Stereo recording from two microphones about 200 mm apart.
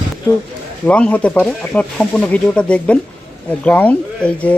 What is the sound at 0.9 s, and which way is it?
Speech, 5° left (ahead or behind).